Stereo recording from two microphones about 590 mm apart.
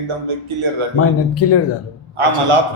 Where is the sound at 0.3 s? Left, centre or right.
Right.